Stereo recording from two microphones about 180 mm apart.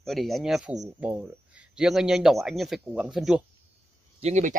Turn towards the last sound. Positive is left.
turn(degrees=-40)  # may be behind; listen again after turning